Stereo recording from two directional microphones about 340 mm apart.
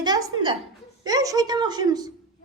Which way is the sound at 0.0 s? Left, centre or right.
Centre.